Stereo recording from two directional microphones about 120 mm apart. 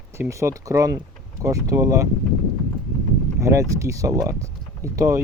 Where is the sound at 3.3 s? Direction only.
25° right (ahead or behind).